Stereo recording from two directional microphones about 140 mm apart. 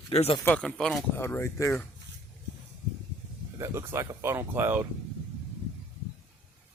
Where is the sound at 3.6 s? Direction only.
20° right (ahead or behind).